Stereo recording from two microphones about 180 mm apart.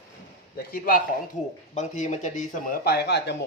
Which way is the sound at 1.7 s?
40° left (ahead or behind).